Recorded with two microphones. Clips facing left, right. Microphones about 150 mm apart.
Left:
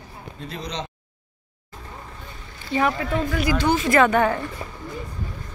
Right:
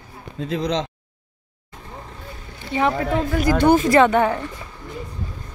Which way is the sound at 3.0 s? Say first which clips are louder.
Right 3 dB; 45° right (ahead or behind).